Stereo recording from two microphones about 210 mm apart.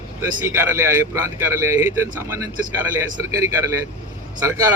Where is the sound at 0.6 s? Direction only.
10° right (ahead or behind).